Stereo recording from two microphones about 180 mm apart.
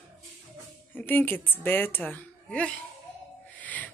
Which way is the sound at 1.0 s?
10° left (ahead or behind).